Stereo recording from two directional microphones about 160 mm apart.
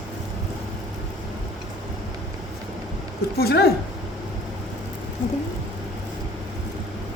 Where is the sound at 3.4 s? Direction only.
80° left.